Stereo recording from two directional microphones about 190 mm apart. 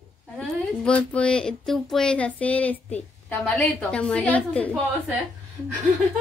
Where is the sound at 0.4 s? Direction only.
5° left (ahead or behind).